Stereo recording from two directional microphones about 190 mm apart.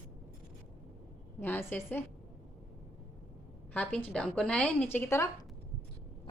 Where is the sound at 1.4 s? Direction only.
10° left (ahead or behind).